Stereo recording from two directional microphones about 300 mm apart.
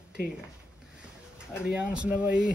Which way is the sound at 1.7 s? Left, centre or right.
Centre.